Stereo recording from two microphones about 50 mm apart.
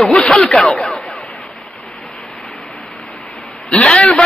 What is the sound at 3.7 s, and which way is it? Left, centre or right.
Speech, centre.